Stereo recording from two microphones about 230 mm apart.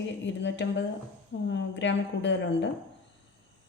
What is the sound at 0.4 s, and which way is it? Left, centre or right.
A woman's voice, left.